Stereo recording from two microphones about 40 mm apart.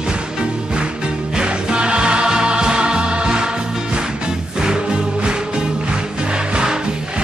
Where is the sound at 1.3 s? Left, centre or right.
Right.